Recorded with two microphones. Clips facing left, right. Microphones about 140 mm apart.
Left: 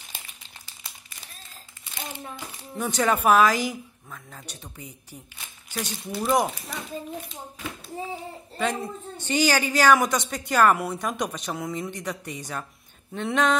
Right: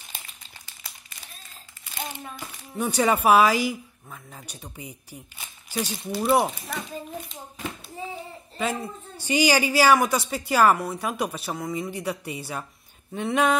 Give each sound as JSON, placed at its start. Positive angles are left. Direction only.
{"t": 2.8, "sound": "speech", "side_deg": -10}
{"t": 8.5, "sound": "speech", "side_deg": -5}